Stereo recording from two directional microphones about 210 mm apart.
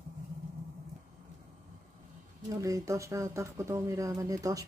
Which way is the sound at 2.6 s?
15° right (ahead or behind).